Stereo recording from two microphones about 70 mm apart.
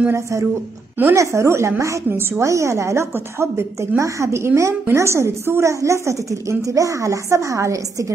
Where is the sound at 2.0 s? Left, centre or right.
Right.